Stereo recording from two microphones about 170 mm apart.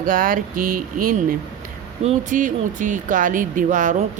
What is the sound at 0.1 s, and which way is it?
Speech, 55° right (ahead or behind).